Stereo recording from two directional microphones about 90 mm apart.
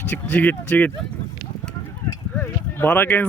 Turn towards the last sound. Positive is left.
turn(degrees=20)  # may be behind; listen again after turning